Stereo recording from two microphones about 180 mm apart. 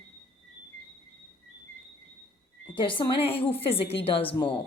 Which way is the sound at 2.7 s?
25° left (ahead or behind).